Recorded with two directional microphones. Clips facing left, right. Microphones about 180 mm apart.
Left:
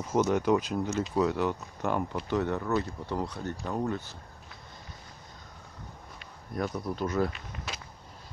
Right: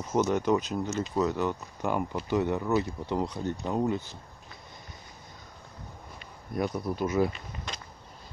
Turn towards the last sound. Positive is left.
turn(degrees=5)  # may be behind; listen again after turning